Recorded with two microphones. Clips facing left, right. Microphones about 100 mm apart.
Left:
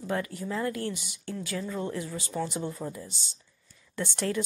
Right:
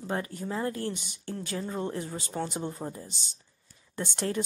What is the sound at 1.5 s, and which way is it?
Speech, 35° right (ahead or behind).